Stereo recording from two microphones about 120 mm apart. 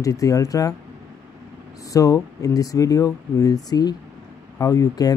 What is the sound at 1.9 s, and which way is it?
Speech, 30° left (ahead or behind).